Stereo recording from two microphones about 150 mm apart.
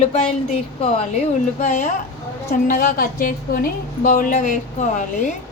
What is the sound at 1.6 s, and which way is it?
Speech, 55° left (ahead or behind).